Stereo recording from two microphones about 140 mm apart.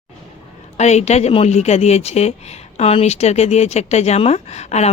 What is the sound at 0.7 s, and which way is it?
A woman's voice, 55° left (ahead or behind).